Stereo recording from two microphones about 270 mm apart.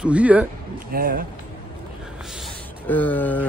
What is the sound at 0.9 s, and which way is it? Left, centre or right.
Speech, right.